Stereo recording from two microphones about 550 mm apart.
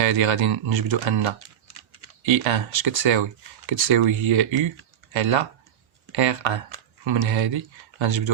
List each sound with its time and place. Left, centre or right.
0.0 s speech: right